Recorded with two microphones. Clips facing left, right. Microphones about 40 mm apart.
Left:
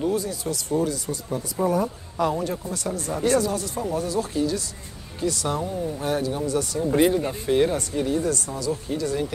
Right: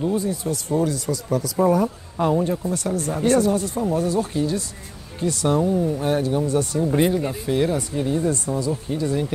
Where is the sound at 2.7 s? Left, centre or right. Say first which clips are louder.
Right 4 dB; right.